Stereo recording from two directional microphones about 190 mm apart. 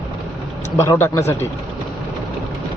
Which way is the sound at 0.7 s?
15° left (ahead or behind).